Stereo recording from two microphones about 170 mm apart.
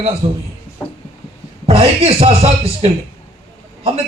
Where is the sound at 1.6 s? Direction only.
35° right (ahead or behind).